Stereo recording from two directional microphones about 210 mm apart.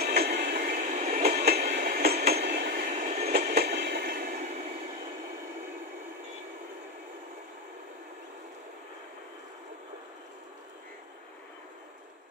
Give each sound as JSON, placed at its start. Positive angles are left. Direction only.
{"t": 0.0, "sound": "train", "side_deg": -50}
{"t": 1.3, "sound": "train", "side_deg": -50}
{"t": 3.3, "sound": "train", "side_deg": -50}